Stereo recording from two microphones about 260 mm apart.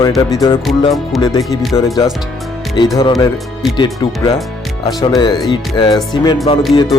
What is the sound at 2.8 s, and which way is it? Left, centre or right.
Speech, centre.